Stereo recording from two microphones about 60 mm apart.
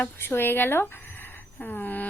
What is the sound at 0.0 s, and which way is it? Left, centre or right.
A woman's voice, left.